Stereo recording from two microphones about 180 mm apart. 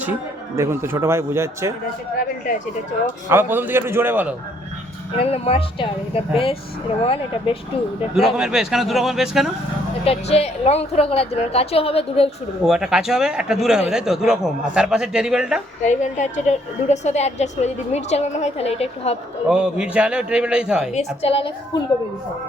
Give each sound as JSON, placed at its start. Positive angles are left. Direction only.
{"t": 0.0, "sound": "a man's voice", "side_deg": -10}
{"t": 3.2, "sound": "a man's voice", "side_deg": -10}
{"t": 5.2, "sound": "a woman's voice", "side_deg": 35}
{"t": 8.4, "sound": "a man's voice", "side_deg": -5}
{"t": 10.0, "sound": "a woman's voice", "side_deg": 35}
{"t": 12.6, "sound": "a man's voice", "side_deg": -5}
{"t": 15.8, "sound": "a woman's voice", "side_deg": 40}
{"t": 19.5, "sound": "a man's voice", "side_deg": -5}
{"t": 20.9, "sound": "a woman's voice", "side_deg": 35}